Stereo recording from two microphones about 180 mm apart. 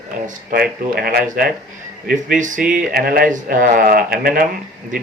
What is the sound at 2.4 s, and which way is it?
Speech, 45° right (ahead or behind).